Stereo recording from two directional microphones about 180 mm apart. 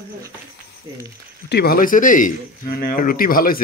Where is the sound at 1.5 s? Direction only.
55° left (ahead or behind).